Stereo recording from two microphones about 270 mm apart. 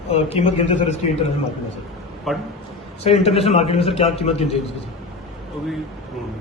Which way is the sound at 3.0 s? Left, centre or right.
Left.